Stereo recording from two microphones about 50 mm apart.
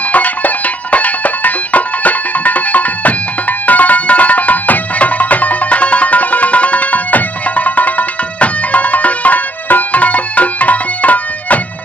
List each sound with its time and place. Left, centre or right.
0.1 s music: left